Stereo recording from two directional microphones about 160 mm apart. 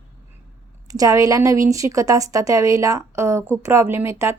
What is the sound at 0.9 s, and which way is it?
Speech, 20° right (ahead or behind).